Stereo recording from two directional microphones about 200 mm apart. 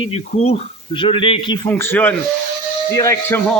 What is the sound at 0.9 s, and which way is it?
Speech, 25° left (ahead or behind).